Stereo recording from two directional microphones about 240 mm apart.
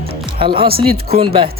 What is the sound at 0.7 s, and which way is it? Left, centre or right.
Speech, right.